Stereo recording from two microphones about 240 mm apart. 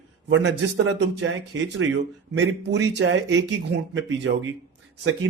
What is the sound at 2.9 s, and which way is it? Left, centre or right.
A man's voice, right.